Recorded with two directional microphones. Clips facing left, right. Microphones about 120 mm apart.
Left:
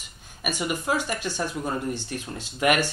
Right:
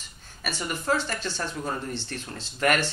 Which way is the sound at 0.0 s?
15° left (ahead or behind).